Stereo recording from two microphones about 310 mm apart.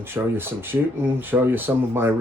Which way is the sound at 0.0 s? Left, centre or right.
Centre.